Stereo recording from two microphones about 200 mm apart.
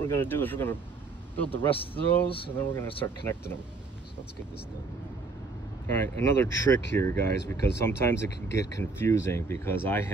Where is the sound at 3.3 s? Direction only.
10° left (ahead or behind).